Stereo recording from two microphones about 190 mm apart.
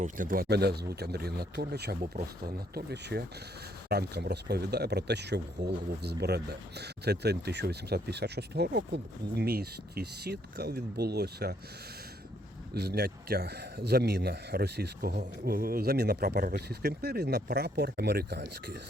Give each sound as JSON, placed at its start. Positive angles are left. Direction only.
{"t": 0.0, "sound": "speech", "side_deg": -45}
{"t": 12.7, "sound": "speech", "side_deg": -55}